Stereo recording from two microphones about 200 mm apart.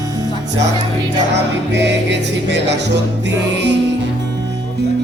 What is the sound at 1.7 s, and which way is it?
Music, 60° right (ahead or behind).